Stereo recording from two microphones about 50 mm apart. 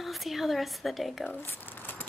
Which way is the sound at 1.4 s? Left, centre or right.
Left.